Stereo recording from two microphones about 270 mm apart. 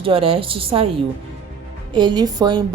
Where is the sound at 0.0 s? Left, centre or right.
Right.